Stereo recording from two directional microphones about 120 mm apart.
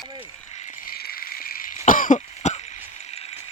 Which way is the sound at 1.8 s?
90° left.